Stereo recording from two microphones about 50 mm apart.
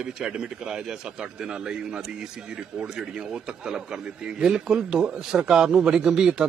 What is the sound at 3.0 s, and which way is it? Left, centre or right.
Speech, centre.